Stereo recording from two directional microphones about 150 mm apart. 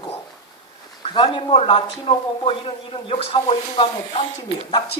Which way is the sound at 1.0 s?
35° left (ahead or behind).